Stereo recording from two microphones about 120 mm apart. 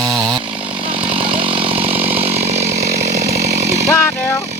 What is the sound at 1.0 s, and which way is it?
Chainsaw, 50° right (ahead or behind).